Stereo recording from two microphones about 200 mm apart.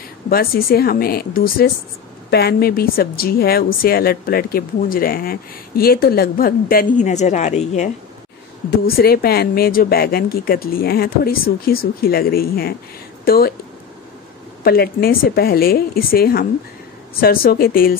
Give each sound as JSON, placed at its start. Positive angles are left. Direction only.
{"t": 0.3, "sound": "a woman's voice", "side_deg": 50}
{"t": 8.6, "sound": "a woman's voice", "side_deg": 50}
{"t": 14.6, "sound": "a woman's voice", "side_deg": 50}